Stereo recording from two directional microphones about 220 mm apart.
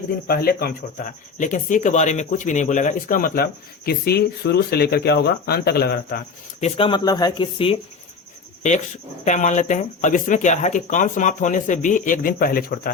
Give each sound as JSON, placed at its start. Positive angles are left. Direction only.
{"t": 0.3, "sound": "speech", "side_deg": 45}
{"t": 6.6, "sound": "speech", "side_deg": 25}
{"t": 9.2, "sound": "speech", "side_deg": 35}